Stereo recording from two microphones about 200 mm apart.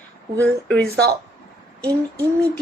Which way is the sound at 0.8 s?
55° right (ahead or behind).